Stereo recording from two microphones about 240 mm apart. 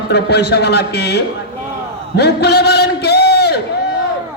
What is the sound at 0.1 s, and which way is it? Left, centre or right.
A man's voice, left.